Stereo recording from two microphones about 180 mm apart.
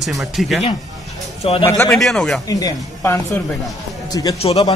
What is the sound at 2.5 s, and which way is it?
A woman's voice, 20° left (ahead or behind).